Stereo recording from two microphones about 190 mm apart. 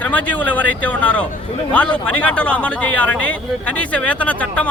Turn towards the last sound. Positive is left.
turn(degrees=10)  # may be behind; listen again after turning